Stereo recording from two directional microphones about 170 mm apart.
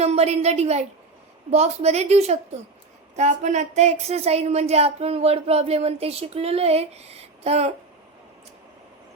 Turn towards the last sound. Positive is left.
turn(degrees=-40)  # may be behind; listen again after turning